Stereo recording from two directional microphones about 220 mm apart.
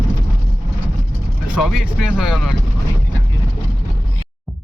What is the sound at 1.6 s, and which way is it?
Speech, centre (ahead or behind).